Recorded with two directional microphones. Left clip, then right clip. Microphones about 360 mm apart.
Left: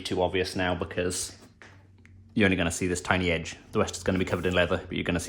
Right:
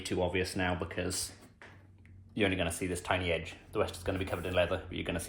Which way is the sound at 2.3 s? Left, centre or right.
Left.